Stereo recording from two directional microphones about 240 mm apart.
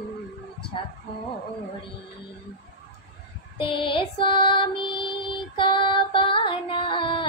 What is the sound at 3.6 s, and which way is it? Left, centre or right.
Music, left.